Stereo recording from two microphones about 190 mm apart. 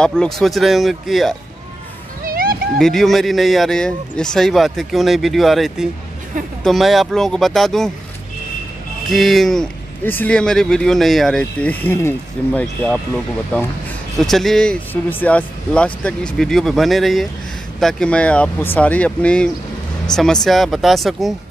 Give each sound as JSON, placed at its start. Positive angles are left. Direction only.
{"t": 0.0, "sound": "speech", "side_deg": 5}
{"t": 2.2, "sound": "a sound", "side_deg": -50}
{"t": 2.8, "sound": "speech", "side_deg": 0}
{"t": 9.1, "sound": "speech", "side_deg": 0}
{"t": 14.1, "sound": "speech", "side_deg": 0}